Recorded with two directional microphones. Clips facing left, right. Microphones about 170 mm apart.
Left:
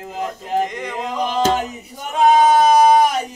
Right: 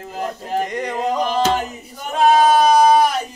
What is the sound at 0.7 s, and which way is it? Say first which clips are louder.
Speech: right 5 dB; 40° right (ahead or behind).